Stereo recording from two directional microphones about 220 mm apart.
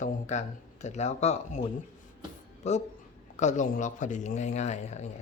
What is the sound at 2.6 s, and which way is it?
Speech, 30° left (ahead or behind).